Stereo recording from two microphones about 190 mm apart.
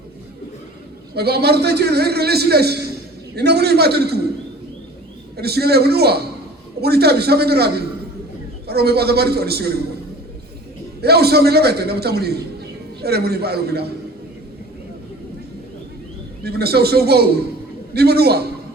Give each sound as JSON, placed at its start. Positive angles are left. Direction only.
{"t": 1.1, "sound": "a man's voice", "side_deg": -55}
{"t": 5.4, "sound": "a man's voice", "side_deg": -55}
{"t": 11.0, "sound": "a man's voice", "side_deg": -55}
{"t": 16.4, "sound": "a man's voice", "side_deg": -55}